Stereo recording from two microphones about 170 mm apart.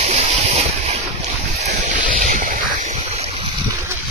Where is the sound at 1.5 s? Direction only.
45° right (ahead or behind).